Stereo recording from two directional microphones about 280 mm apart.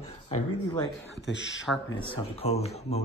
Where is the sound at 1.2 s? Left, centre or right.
Left.